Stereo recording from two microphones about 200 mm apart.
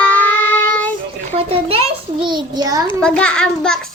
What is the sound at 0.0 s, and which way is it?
Child singing, 5° left (ahead or behind).